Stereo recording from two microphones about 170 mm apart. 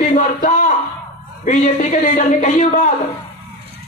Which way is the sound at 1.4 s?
45° left (ahead or behind).